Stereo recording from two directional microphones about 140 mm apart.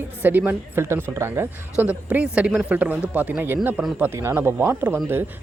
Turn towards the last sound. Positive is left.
turn(degrees=-15)  # may be behind; listen again after turning